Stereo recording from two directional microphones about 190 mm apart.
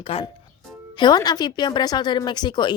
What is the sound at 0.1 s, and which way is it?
Speech, 30° left (ahead or behind).